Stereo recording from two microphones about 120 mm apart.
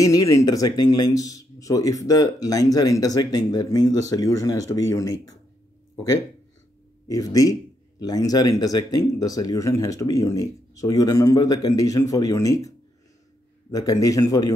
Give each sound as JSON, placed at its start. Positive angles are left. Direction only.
{"t": 0.0, "sound": "speech", "side_deg": 30}
{"t": 7.1, "sound": "speech", "side_deg": 30}